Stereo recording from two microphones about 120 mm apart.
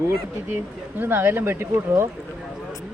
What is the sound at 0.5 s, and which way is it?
Speech, 15° right (ahead or behind).